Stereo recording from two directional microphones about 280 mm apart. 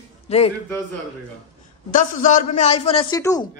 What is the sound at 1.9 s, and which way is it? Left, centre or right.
Speech, left.